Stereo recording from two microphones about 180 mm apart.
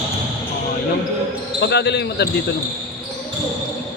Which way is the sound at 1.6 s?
70° left (ahead or behind).